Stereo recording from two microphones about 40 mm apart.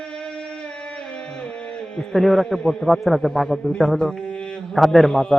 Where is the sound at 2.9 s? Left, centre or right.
Centre.